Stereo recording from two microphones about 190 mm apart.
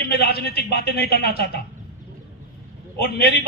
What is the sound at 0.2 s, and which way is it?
A man's voice, 55° left (ahead or behind).